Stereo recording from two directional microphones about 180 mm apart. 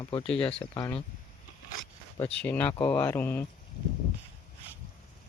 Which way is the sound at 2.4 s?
10° left (ahead or behind).